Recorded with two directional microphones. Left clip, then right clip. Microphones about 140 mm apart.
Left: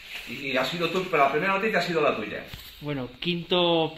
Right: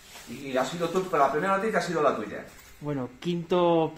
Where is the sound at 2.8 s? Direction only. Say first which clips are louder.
Left 2 dB; 25° right (ahead or behind).